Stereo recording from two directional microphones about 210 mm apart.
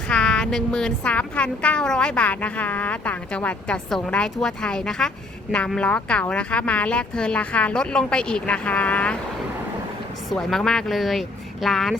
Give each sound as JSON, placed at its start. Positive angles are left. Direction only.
{"t": 0.1, "sound": "a woman's voice", "side_deg": 5}
{"t": 10.2, "sound": "a woman's voice", "side_deg": 0}